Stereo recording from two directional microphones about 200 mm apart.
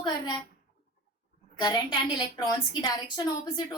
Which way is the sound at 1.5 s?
20° left (ahead or behind).